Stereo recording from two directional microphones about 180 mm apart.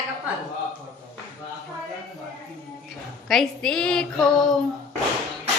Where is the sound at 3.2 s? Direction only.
Centre (ahead or behind).